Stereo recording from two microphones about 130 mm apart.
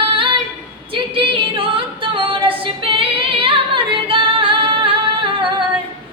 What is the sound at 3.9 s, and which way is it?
Music, 40° right (ahead or behind).